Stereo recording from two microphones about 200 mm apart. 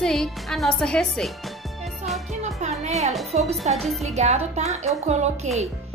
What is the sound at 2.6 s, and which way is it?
Music, 35° right (ahead or behind).